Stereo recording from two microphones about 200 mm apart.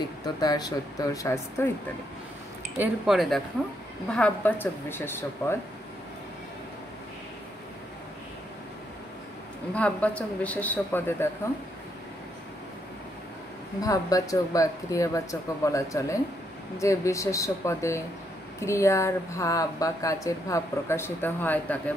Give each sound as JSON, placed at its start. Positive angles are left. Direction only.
{"t": 0.4, "sound": "speech", "side_deg": 20}
{"t": 2.8, "sound": "speech", "side_deg": 0}
{"t": 9.8, "sound": "speech", "side_deg": 5}
{"t": 13.7, "sound": "speech", "side_deg": 15}